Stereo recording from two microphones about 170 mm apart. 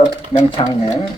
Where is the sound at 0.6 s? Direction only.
30° left (ahead or behind).